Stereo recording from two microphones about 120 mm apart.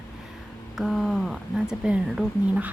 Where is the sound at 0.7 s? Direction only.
Centre (ahead or behind).